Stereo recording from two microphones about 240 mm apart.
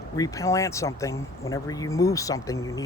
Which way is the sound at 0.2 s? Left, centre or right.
Centre.